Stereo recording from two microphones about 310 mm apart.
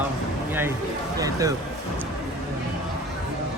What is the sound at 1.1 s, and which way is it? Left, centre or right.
Speech, centre.